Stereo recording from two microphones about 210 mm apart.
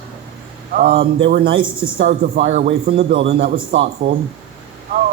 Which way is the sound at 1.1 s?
55° right (ahead or behind).